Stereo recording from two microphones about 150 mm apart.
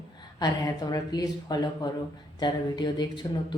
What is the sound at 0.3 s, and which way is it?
Speech, 25° left (ahead or behind).